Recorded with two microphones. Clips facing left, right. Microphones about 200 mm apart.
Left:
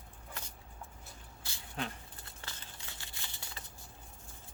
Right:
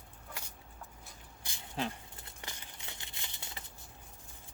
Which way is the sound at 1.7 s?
25° right (ahead or behind).